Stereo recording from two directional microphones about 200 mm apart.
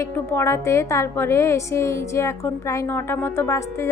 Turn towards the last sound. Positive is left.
turn(degrees=15)  # may be behind; listen again after turning